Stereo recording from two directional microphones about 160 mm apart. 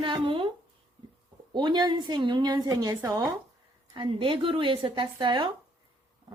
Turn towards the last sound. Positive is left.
turn(degrees=-30)  # may be behind; listen again after turning